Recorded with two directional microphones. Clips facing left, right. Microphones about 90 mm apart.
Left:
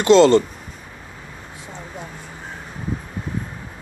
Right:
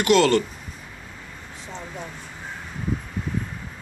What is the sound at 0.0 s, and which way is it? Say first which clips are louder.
Speech: left 6 dB; 25° left (ahead or behind).